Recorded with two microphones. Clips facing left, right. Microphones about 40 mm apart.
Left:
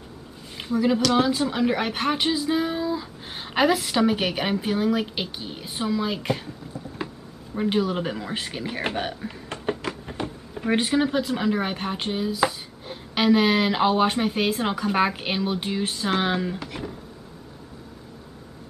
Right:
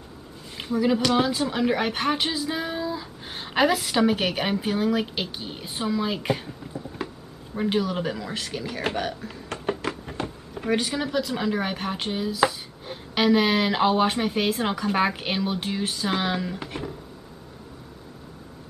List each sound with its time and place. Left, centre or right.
0.6 s speech: centre
7.5 s speech: centre; by 9.6 s left
9.7 s a sound: centre
10.7 s speech: centre
11.3 s speech: centre